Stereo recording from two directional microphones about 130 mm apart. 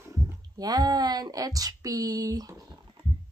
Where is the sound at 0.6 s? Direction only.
30° right (ahead or behind).